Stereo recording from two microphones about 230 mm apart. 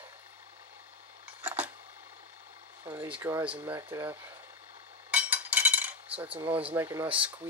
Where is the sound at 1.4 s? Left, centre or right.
Centre.